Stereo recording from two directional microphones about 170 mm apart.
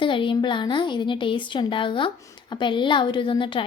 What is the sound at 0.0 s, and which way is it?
Speech, 30° left (ahead or behind).